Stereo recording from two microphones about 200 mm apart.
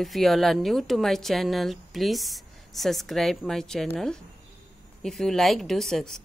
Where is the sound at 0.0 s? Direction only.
Centre (ahead or behind).